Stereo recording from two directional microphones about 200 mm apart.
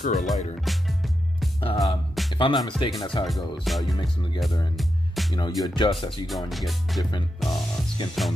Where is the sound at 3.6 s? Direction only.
Centre (ahead or behind).